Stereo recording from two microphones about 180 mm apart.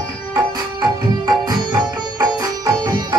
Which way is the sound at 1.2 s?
25° right (ahead or behind).